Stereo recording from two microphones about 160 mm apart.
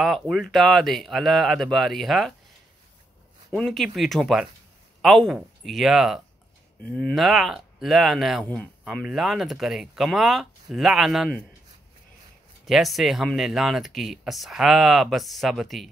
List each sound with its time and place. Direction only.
0.0 s speech: centre (ahead or behind)
3.5 s speech: centre (ahead or behind)
6.8 s speech: 10° left (ahead or behind)
12.6 s speech: centre (ahead or behind)